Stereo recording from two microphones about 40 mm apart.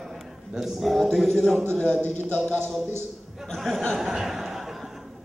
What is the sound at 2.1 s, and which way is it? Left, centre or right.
Speech, left.